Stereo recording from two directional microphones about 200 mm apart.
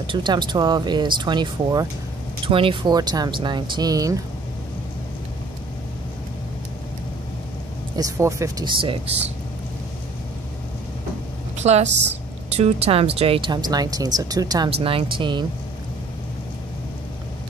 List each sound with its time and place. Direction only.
0.0 s speech: 25° right (ahead or behind)
7.9 s speech: 15° right (ahead or behind)
11.5 s a woman's voice: 35° right (ahead or behind)